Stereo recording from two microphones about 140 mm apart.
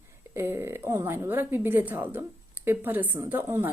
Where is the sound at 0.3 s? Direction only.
15° right (ahead or behind).